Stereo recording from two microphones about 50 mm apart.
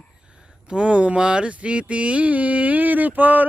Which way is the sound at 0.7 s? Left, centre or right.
Right.